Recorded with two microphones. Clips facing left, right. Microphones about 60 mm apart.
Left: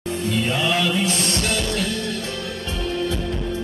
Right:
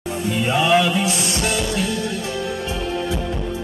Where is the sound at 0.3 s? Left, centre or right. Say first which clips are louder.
Right 5 dB; centre.